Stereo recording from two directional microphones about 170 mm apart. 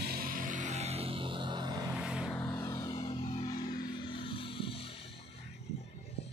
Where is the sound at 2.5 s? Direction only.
20° left (ahead or behind).